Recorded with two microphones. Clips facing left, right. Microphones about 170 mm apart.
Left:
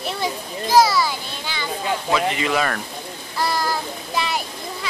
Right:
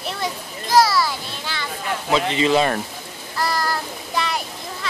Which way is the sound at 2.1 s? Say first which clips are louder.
Right 4 dB; 25° right (ahead or behind).